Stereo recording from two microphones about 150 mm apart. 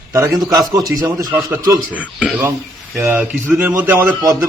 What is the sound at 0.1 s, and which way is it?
A man's voice, 20° right (ahead or behind).